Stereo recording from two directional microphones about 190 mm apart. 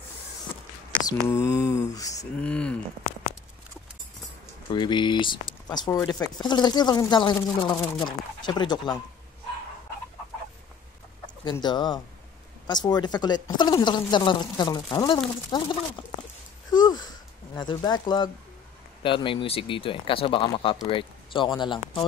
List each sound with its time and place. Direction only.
1.2 s mantra: 15° left (ahead or behind)
2.4 s speech: 5° left (ahead or behind)
4.6 s speech: 25° left (ahead or behind)
11.4 s speech: 25° left (ahead or behind)